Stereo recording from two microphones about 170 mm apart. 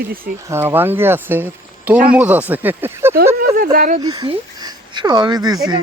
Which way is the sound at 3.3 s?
60° right (ahead or behind).